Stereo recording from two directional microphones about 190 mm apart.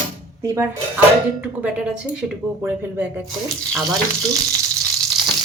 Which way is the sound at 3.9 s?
20° right (ahead or behind).